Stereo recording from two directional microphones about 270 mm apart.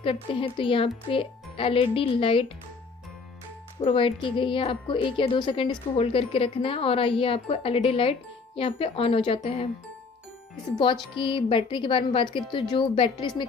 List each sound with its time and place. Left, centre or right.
0.0 s a woman's voice: centre
3.8 s a woman's voice: centre
11.1 s a woman's voice: centre